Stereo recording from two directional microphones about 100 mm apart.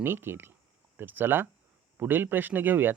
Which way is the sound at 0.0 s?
20° right (ahead or behind).